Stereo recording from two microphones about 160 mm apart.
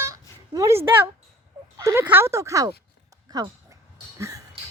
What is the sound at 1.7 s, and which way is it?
Speech, 20° right (ahead or behind).